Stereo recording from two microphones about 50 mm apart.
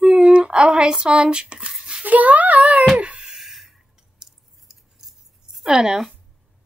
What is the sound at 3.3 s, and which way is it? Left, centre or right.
Scissors, centre.